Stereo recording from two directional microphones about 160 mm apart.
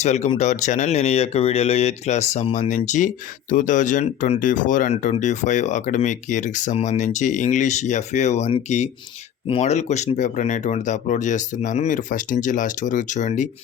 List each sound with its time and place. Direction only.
0.0 s speech: 45° left (ahead or behind)